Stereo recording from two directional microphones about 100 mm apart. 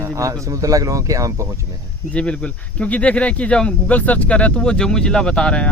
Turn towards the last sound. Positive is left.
turn(degrees=10)  # may be behind; listen again after turning